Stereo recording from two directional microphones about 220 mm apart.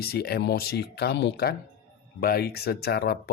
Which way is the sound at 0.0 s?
45° left (ahead or behind).